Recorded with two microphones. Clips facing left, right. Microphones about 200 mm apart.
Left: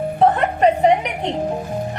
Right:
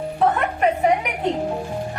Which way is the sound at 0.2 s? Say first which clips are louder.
Left 4 dB; 35° left (ahead or behind).